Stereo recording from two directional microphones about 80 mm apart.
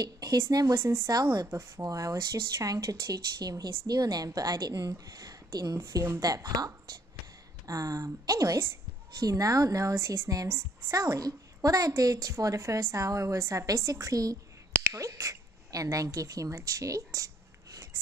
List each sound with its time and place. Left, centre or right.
0.0 s a woman's voice: right
1.2 s a woman's voice: right
1.5 s a woman's voice: right
5.8 s a woman's voice: right
14.8 s a sound: right